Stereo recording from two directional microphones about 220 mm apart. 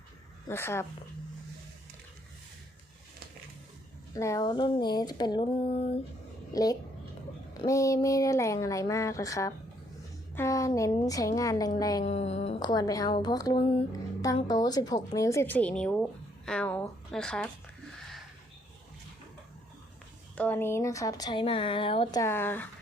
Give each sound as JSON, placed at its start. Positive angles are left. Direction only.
{"t": 0.4, "sound": "speech", "side_deg": 10}
{"t": 4.1, "sound": "a woman's voice", "side_deg": 15}
{"t": 6.5, "sound": "a woman's voice", "side_deg": 15}
{"t": 12.0, "sound": "a woman's voice", "side_deg": 30}
{"t": 20.3, "sound": "speech", "side_deg": 5}